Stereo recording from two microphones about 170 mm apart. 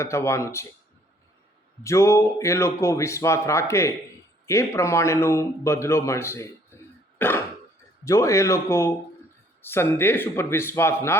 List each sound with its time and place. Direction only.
0.0 s a man's voice: 15° left (ahead or behind)
1.8 s a man's voice: 15° left (ahead or behind)